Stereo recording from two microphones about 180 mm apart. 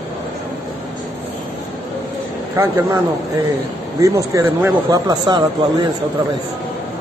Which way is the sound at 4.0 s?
15° right (ahead or behind).